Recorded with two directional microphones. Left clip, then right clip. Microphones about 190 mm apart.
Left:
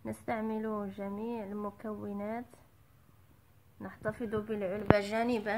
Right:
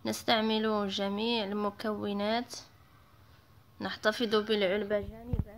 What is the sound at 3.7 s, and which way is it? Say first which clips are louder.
Speech: right 8 dB; 15° right (ahead or behind).